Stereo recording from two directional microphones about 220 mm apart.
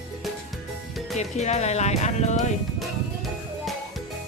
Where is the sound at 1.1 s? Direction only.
30° left (ahead or behind).